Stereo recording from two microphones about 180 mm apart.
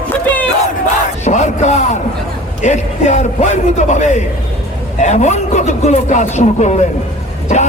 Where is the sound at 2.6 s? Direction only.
40° left (ahead or behind).